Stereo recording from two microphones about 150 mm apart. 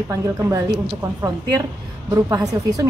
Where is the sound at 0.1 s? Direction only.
20° right (ahead or behind).